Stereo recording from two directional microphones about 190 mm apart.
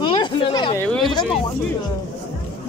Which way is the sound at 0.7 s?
5° left (ahead or behind).